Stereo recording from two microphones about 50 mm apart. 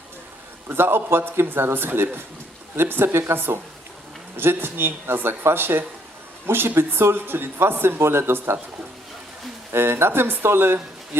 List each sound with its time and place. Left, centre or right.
0.7 s speech: right
9.7 s speech: right